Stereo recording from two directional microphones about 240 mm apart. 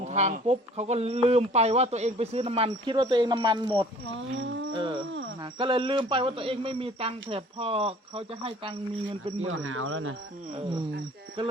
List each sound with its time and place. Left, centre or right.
0.0 s speech: right
4.1 s speech: right
4.7 s speech: centre
9.5 s speech: right
10.6 s speech: right